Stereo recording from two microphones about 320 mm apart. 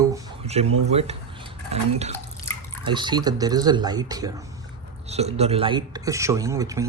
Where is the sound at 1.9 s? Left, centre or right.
Centre.